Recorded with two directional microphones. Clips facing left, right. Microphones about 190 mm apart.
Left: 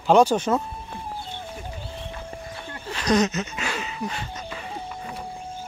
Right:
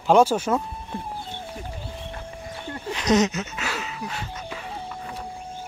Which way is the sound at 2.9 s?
20° right (ahead or behind).